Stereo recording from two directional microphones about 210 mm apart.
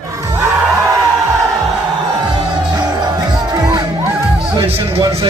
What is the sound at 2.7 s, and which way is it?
Music, 20° right (ahead or behind).